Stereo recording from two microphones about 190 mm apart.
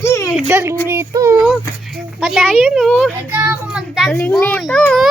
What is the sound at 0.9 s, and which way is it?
Child singing, 15° right (ahead or behind).